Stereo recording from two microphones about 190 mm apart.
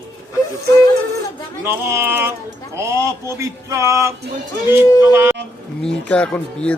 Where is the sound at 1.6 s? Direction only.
15° right (ahead or behind).